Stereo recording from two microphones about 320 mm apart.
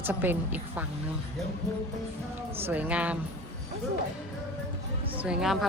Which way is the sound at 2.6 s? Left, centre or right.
Centre.